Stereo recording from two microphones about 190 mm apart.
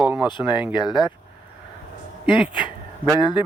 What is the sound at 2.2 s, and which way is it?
Speech, 25° left (ahead or behind).